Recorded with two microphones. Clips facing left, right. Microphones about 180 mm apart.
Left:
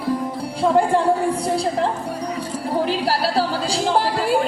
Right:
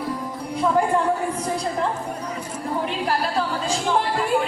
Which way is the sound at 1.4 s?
30° left (ahead or behind).